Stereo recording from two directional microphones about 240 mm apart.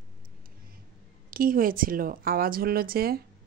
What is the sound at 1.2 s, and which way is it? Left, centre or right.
Speech, right.